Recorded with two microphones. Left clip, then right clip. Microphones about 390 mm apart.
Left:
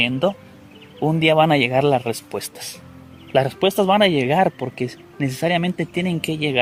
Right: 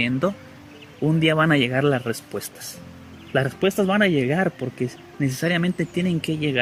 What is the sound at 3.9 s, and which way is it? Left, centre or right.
Speech, centre.